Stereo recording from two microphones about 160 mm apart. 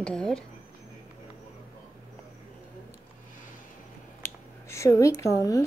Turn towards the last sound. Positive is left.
turn(degrees=20)  # may be behind; listen again after turning